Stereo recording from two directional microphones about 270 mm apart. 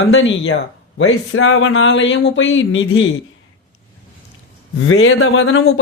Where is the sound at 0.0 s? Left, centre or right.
Left.